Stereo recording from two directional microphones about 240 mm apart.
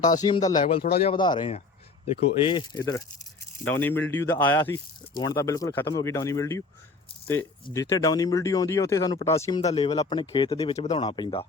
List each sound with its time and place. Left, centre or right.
0.2 s speech: centre
9.6 s speech: left